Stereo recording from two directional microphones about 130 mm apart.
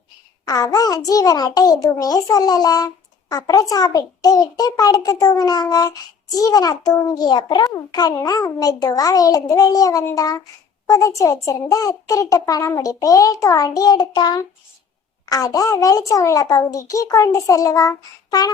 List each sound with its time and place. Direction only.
0.4 s a child's voice: 30° left (ahead or behind)